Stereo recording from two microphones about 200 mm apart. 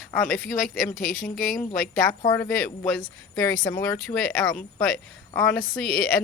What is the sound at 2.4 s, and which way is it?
A woman's voice, 5° left (ahead or behind).